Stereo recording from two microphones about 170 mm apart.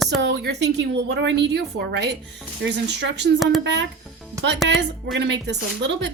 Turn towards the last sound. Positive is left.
turn(degrees=-90)